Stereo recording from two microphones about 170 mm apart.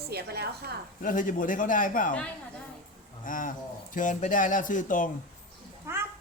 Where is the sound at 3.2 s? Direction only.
50° left (ahead or behind).